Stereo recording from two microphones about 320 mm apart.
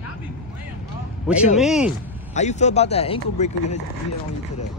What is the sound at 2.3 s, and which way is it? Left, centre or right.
Speech, left.